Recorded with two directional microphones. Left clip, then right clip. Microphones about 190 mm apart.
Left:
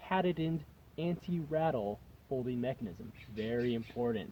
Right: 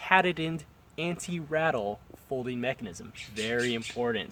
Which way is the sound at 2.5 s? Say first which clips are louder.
Right 5 dB; 10° left (ahead or behind).